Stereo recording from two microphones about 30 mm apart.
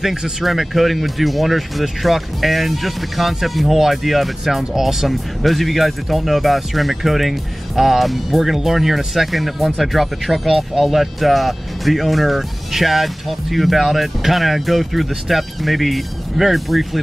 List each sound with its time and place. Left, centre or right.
0.0 s speech: centre
0.4 s speech: centre
5.0 s speech: centre